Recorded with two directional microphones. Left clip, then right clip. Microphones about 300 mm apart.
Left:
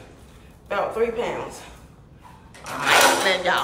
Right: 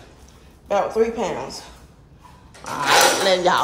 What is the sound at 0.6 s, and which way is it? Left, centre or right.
Speech, centre.